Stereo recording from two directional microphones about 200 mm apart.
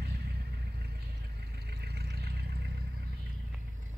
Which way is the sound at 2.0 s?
55° right (ahead or behind).